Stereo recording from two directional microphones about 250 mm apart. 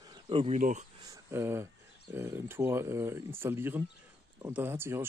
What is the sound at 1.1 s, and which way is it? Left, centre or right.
Speech, centre.